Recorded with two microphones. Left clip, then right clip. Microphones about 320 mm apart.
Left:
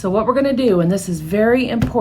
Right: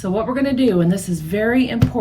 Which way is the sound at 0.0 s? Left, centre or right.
Centre.